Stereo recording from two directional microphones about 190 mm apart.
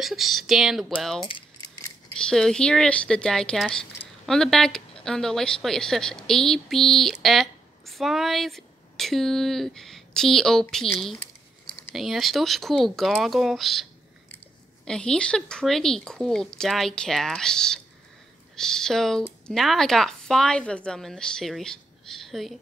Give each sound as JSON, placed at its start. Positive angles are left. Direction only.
{"t": 0.0, "sound": "speech", "side_deg": 0}
{"t": 1.3, "sound": "keys jangling", "side_deg": 20}
{"t": 2.1, "sound": "speech", "side_deg": 5}
{"t": 14.9, "sound": "speech", "side_deg": 5}